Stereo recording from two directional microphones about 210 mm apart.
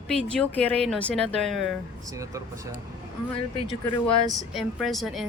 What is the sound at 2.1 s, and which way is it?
Speech, 15° right (ahead or behind).